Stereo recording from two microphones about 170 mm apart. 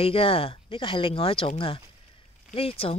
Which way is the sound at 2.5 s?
35° left (ahead or behind).